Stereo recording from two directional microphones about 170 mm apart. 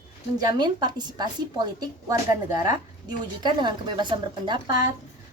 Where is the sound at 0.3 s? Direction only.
25° right (ahead or behind).